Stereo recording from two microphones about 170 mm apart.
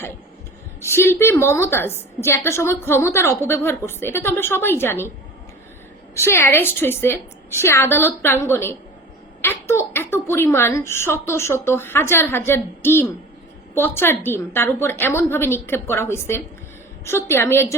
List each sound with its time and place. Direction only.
0.8 s a woman's voice: 15° left (ahead or behind)
6.1 s a woman's voice: 15° left (ahead or behind)